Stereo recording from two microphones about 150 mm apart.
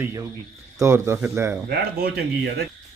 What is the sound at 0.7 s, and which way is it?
Speech, 20° right (ahead or behind).